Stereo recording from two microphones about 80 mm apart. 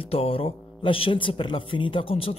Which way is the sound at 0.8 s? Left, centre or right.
Left.